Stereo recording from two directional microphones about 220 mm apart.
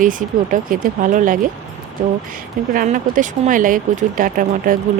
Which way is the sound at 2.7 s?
40° right (ahead or behind).